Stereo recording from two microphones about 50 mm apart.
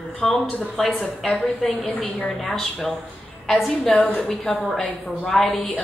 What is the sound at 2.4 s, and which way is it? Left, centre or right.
Speech, centre.